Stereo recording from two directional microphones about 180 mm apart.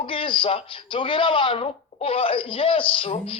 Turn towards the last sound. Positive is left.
turn(degrees=30)  # may be behind; listen again after turning